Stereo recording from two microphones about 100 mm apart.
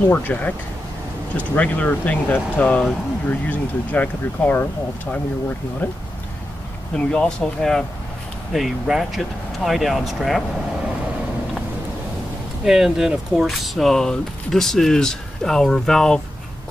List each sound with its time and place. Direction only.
0.1 s speech: 15° left (ahead or behind)
5.8 s speech: 20° left (ahead or behind); by 10.4 s centre (ahead or behind)
12.6 s speech: 5° right (ahead or behind)